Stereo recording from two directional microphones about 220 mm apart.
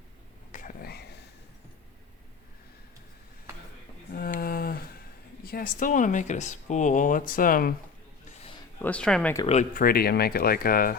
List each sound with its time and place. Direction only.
0.5 s whispering: 40° left (ahead or behind)
4.1 s a sound: 40° left (ahead or behind)
5.5 s speech: 40° left (ahead or behind)
8.8 s speech: 5° left (ahead or behind)
9.4 s speech: 30° left (ahead or behind)